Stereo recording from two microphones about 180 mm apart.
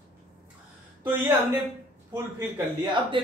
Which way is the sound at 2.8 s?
25° right (ahead or behind).